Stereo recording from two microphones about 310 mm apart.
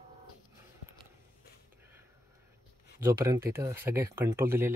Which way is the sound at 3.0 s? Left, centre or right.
Centre.